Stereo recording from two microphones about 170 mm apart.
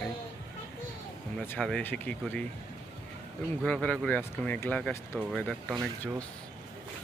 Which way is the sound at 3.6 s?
5° left (ahead or behind).